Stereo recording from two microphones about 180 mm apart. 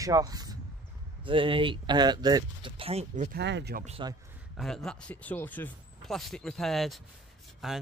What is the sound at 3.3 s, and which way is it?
Speech, 70° right (ahead or behind).